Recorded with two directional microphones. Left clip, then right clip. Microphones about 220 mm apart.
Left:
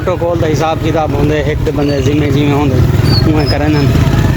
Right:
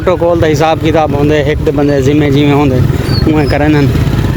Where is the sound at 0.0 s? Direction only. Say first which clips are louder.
Right 4 dB; 40° right (ahead or behind).